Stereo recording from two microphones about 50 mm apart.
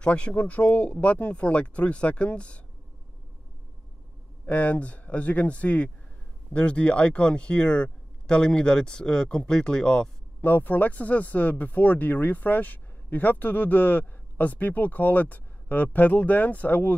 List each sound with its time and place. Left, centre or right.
0.0 s speech: left
4.5 s speech: left
10.4 s speech: left